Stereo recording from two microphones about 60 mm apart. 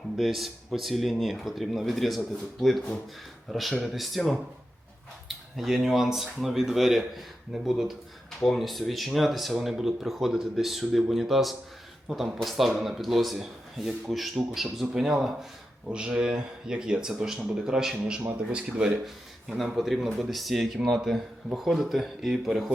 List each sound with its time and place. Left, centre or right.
0.2 s speech: centre
5.5 s speech: centre
17.9 s a man's voice: right
19.0 s speech: centre